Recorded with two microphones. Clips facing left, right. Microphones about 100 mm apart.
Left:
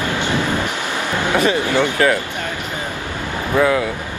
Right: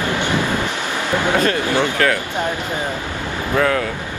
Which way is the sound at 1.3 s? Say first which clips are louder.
Left 4 dB; 15° left (ahead or behind).